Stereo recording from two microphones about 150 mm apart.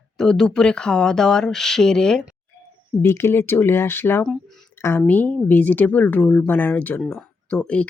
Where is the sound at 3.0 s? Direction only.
15° left (ahead or behind).